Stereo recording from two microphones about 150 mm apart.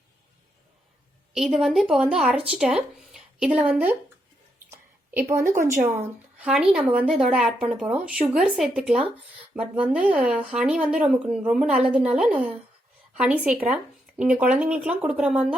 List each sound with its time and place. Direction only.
1.3 s speech: 5° right (ahead or behind)
4.7 s a sound: 15° right (ahead or behind)
6.4 s speech: 5° right (ahead or behind)